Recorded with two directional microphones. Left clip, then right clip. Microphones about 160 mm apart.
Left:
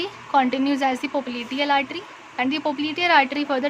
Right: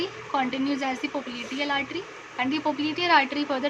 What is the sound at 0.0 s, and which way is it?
Speech, 80° left.